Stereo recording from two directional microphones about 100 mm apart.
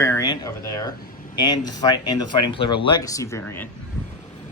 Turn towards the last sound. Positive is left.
turn(degrees=25)  # may be behind; listen again after turning